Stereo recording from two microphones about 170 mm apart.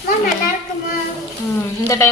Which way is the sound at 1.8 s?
15° left (ahead or behind).